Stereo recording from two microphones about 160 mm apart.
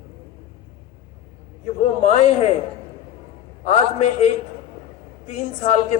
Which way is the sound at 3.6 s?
45° left (ahead or behind).